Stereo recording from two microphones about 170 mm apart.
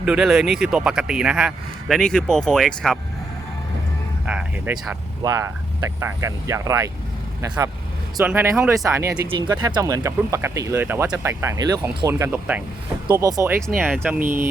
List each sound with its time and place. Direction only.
0.0 s speech: 5° right (ahead or behind)
4.3 s speech: 10° right (ahead or behind)
5.2 s speech: 20° right (ahead or behind)